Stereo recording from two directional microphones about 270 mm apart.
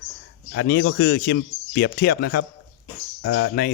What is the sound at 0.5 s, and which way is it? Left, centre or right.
A man's voice, left.